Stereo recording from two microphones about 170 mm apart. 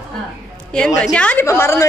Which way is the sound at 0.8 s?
5° left (ahead or behind).